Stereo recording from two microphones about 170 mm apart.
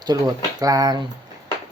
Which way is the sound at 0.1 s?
20° right (ahead or behind).